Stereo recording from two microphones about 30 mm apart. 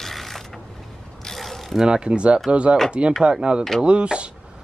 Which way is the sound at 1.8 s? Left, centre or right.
Right.